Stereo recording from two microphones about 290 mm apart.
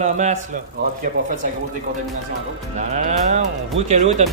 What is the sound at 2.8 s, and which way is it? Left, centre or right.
Speech, right.